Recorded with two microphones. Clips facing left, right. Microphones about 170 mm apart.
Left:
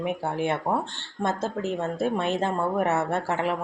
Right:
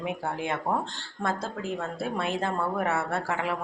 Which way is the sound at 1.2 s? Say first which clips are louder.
Left 4 dB; 20° left (ahead or behind).